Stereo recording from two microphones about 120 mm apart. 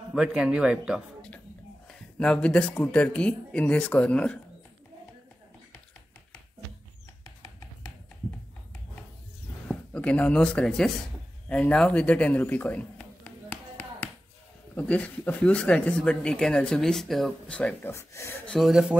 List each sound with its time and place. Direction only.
0.1 s speech: 5° right (ahead or behind)
1.9 s speech: 10° left (ahead or behind)
9.7 s speech: 10° left (ahead or behind)
11.4 s a sound: 10° left (ahead or behind)
14.8 s speech: 10° left (ahead or behind)
17.9 s speech: 20° left (ahead or behind)
18.5 s speech: centre (ahead or behind)